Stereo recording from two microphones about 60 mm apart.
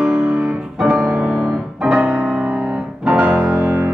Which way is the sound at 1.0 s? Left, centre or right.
Right.